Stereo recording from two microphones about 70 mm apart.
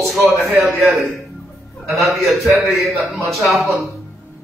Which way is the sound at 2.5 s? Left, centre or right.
Right.